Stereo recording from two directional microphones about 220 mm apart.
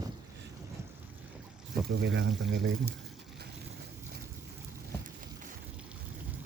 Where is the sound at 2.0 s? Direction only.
60° right (ahead or behind).